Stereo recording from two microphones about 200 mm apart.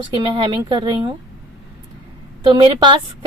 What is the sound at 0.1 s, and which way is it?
A woman's voice, 25° right (ahead or behind).